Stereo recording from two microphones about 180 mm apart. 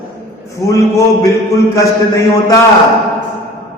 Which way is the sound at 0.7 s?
15° left (ahead or behind).